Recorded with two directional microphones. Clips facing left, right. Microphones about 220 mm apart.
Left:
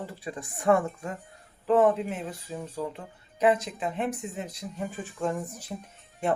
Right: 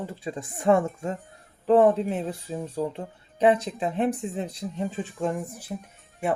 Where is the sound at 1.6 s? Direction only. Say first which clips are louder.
Right 3 dB; 35° right (ahead or behind).